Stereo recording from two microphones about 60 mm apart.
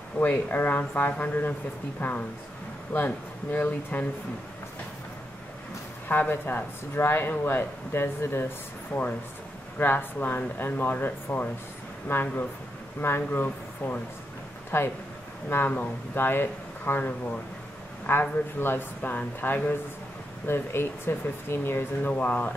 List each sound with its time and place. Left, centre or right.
0.2 s speech: left
6.0 s speech: left
9.8 s speech: left
22.1 s speech: left